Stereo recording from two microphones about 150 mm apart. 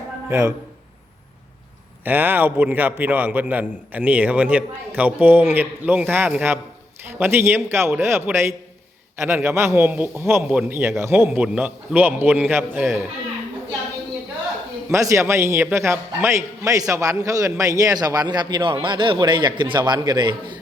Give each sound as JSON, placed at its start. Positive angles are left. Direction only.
{"t": 0.3, "sound": "a man's voice", "side_deg": -20}
{"t": 2.0, "sound": "a man's voice", "side_deg": -10}
{"t": 14.8, "sound": "a man's voice", "side_deg": -20}